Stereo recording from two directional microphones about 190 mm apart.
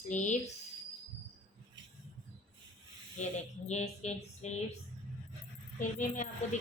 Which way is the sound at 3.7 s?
35° left (ahead or behind).